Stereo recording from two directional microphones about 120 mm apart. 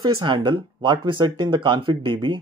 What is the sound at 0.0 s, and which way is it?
Speech, 40° right (ahead or behind).